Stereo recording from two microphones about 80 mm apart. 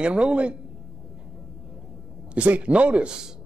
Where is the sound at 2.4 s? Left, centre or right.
Centre.